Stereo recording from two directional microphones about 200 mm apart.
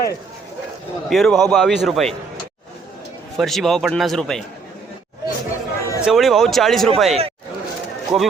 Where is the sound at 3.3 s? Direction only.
Centre (ahead or behind).